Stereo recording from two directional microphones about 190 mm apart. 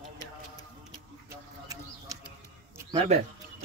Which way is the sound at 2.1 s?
15° right (ahead or behind).